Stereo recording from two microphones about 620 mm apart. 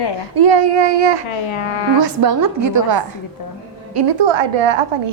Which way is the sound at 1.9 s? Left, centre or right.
Right.